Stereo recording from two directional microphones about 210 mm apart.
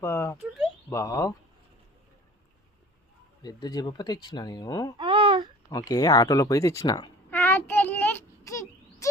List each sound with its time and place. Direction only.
0.0 s a sound: 10° left (ahead or behind)
0.9 s speech: 15° left (ahead or behind)
3.4 s speech: 20° left (ahead or behind)
4.9 s babbling: 25° right (ahead or behind)
5.7 s speech: 15° left (ahead or behind)
7.3 s child singing: 10° left (ahead or behind)